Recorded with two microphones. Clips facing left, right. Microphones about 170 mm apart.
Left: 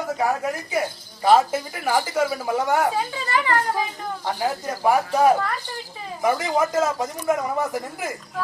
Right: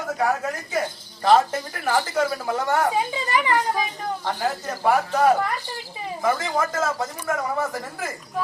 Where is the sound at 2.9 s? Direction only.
15° right (ahead or behind).